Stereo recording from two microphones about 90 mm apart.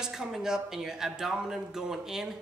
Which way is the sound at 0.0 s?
5° right (ahead or behind).